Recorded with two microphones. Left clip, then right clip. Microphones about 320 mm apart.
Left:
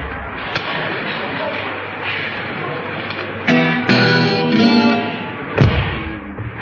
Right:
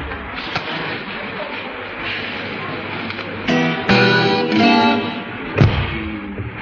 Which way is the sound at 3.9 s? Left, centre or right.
Centre.